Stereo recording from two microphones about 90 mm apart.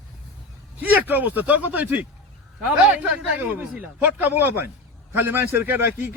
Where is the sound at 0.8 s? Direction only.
20° right (ahead or behind).